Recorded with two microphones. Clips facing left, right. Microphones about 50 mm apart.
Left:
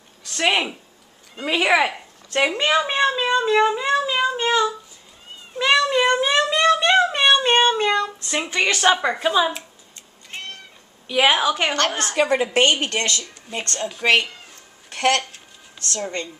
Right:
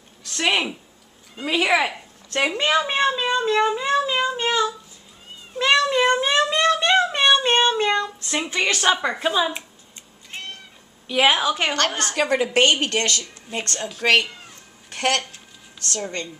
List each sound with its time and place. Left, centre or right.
0.3 s speech: centre
5.6 s cat: centre
11.1 s a woman's voice: centre
12.8 s a woman's voice: centre
13.6 s a woman's voice: centre